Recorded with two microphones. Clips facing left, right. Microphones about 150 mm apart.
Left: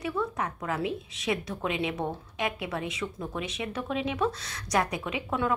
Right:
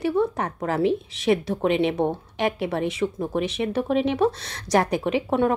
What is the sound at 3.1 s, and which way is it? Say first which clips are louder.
Speech: right 9 dB; 50° right (ahead or behind).